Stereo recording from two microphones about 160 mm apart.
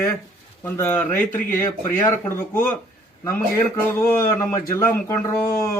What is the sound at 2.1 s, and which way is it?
Speech, 10° left (ahead or behind).